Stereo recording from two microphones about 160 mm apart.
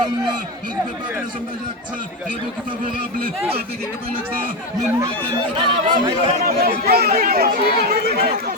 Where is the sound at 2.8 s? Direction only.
65° right (ahead or behind).